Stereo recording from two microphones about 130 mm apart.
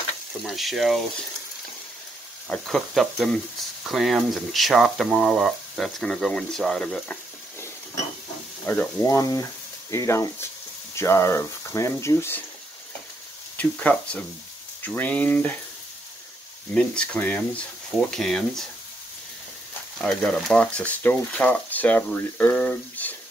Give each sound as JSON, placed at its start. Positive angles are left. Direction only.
{"t": 0.5, "sound": "speech", "side_deg": 0}
{"t": 2.5, "sound": "speech", "side_deg": 0}
{"t": 8.6, "sound": "speech", "side_deg": 20}
{"t": 13.6, "sound": "speech", "side_deg": 10}
{"t": 16.7, "sound": "speech", "side_deg": 5}
{"t": 20.0, "sound": "speech", "side_deg": 5}